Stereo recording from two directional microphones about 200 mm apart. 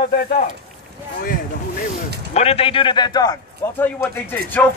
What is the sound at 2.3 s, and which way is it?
A man's voice, 30° left (ahead or behind).